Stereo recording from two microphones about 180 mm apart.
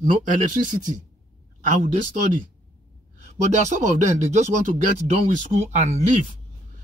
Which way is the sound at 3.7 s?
40° right (ahead or behind).